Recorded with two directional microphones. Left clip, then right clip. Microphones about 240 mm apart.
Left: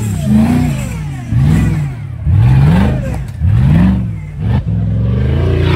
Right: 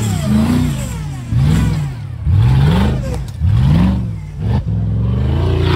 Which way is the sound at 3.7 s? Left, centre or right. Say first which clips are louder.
Left 3 dB; right.